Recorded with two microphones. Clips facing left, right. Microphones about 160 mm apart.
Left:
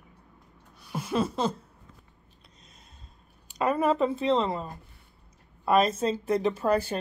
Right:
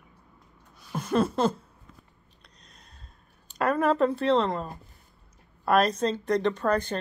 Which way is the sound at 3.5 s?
5° left (ahead or behind).